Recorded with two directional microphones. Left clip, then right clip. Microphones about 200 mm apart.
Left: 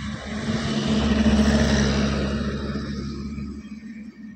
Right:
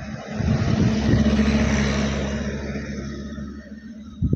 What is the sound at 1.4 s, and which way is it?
Vehicle, 35° left (ahead or behind).